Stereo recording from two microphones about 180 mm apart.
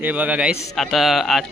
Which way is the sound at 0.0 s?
10° right (ahead or behind).